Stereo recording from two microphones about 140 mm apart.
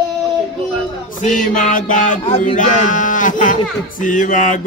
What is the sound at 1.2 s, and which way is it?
Speech, 65° left (ahead or behind).